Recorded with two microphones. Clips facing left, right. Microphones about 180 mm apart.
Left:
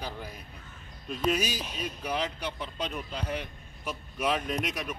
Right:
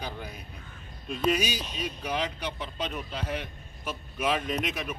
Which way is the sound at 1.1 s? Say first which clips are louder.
Right 2 dB; 10° right (ahead or behind).